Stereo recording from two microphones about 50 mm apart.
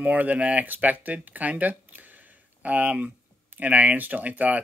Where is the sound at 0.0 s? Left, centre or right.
Right.